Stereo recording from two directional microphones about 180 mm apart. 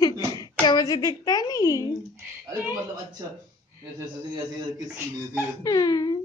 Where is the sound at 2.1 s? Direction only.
10° right (ahead or behind).